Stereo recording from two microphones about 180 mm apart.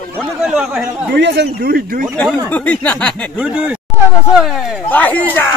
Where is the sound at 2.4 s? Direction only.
10° left (ahead or behind).